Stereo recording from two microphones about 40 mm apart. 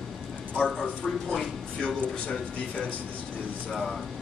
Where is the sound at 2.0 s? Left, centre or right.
Left.